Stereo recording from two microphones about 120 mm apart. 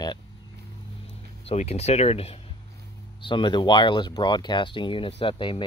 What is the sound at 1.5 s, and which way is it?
Speech, 60° left (ahead or behind).